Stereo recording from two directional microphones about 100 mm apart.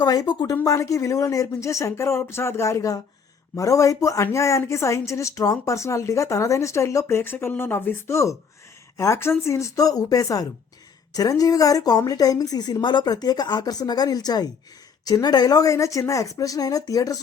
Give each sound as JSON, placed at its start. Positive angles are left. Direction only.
{"t": 0.0, "sound": "a woman's voice", "side_deg": 40}